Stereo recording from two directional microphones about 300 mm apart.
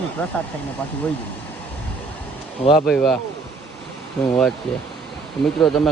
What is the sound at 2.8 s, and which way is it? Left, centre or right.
Speech, centre.